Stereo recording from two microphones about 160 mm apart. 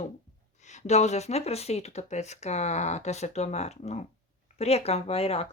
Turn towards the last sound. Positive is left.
turn(degrees=35)  # may be behind; listen again after turning